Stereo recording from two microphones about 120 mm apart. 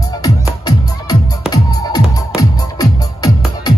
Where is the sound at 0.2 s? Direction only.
30° left (ahead or behind).